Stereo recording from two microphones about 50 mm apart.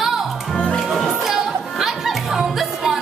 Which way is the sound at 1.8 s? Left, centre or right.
Centre.